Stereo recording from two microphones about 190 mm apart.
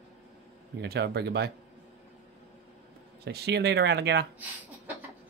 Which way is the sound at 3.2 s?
60° right (ahead or behind).